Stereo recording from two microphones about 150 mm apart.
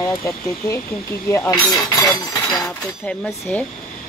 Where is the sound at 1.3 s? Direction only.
20° left (ahead or behind).